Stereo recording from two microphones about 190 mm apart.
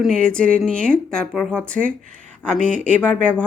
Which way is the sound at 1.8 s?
45° right (ahead or behind).